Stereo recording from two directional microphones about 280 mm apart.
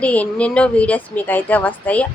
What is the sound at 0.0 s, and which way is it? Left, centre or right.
A woman's voice, centre.